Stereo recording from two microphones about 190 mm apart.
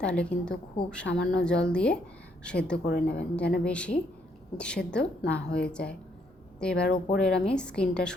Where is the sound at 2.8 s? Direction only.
60° left (ahead or behind).